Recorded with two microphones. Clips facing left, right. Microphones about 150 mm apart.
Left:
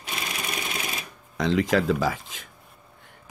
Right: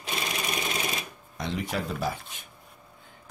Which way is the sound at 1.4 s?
90° left.